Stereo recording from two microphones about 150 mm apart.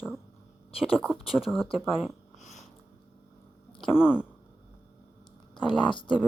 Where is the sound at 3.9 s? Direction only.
5° right (ahead or behind).